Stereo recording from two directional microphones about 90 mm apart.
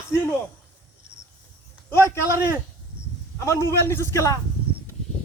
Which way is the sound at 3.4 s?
30° left (ahead or behind).